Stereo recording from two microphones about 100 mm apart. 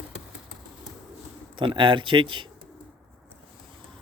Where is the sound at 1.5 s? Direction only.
55° right (ahead or behind).